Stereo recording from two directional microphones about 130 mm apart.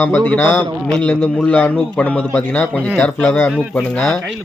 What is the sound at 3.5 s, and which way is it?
Speech, centre (ahead or behind).